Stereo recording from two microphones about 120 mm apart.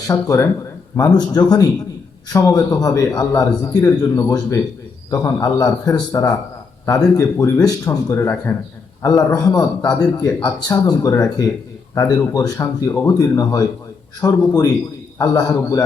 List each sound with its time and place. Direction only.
0.1 s a man's voice: 25° left (ahead or behind)